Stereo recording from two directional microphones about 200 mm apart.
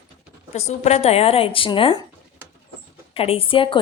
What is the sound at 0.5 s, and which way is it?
Speech, 35° left (ahead or behind).